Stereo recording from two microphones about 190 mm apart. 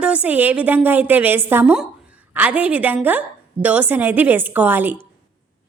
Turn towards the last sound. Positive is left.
turn(degrees=-10)  # may be behind; listen again after turning